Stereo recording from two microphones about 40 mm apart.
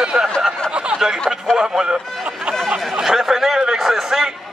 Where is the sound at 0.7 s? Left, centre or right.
Right.